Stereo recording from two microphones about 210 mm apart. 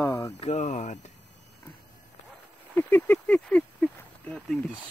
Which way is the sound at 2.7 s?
10° left (ahead or behind).